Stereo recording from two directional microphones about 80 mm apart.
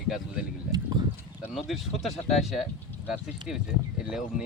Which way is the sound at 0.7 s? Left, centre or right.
Right.